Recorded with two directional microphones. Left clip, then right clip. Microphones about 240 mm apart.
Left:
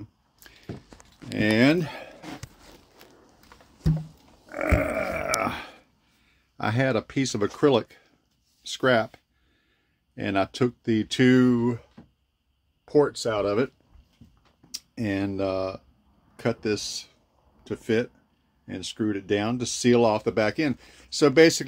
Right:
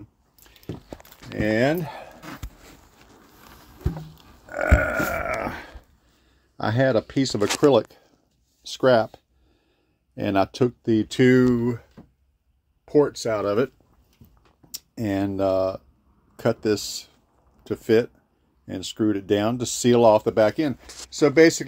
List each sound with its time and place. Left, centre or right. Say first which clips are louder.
1.3 s speech: even; centre
4.5 s grunt: right 3 dB; centre
5.2 s a sound: left 1 dB; centre
6.5 s speech: right 4 dB; centre
12.8 s speech: right 2 dB; centre
14.7 s speech: right 2 dB; centre
21.1 s speech: right 1 dB; centre